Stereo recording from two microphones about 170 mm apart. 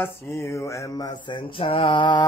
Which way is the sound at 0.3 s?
15° left (ahead or behind).